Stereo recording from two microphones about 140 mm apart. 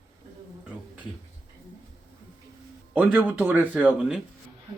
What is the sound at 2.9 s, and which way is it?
Speech, 10° right (ahead or behind).